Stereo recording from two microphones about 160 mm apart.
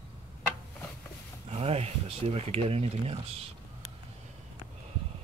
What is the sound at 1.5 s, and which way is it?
Speech, 40° right (ahead or behind).